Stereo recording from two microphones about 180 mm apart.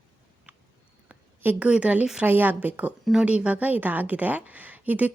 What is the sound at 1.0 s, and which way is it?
A woman's voice, 10° right (ahead or behind).